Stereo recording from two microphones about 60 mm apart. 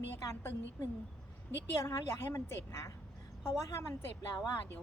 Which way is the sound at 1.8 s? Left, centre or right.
Left.